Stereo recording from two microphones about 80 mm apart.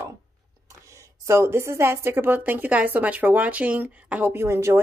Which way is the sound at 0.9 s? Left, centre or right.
Right.